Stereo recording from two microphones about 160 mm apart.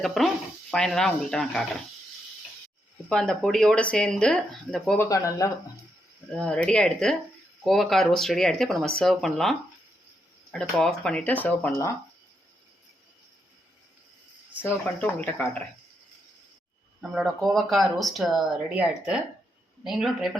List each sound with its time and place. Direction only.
0.0 s speech: centre (ahead or behind)
3.1 s speech: 5° left (ahead or behind)
4.9 s speech: 20° left (ahead or behind)
6.3 s speech: 5° left (ahead or behind)
14.6 s speech: 10° left (ahead or behind)
17.0 s speech: centre (ahead or behind)